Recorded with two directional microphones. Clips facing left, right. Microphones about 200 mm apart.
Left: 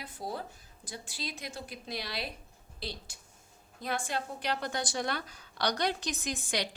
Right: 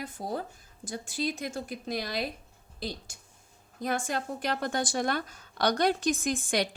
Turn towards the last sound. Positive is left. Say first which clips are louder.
# right 6 dB
turn(degrees=-50)  # may be behind; listen again after turning